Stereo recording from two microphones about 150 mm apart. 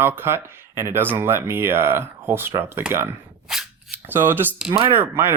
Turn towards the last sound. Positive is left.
turn(degrees=-15)  # may be behind; listen again after turning